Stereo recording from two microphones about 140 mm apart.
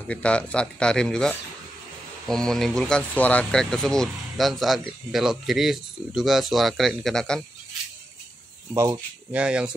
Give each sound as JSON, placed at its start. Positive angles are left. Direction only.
{"t": 0.1, "sound": "speech", "side_deg": 10}
{"t": 8.7, "sound": "speech", "side_deg": -20}
{"t": 9.3, "sound": "speech", "side_deg": -5}